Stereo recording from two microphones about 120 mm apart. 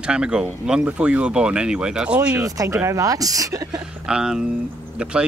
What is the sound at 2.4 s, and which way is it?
Speech, 30° right (ahead or behind).